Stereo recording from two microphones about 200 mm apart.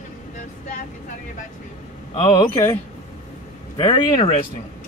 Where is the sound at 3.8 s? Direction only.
25° left (ahead or behind).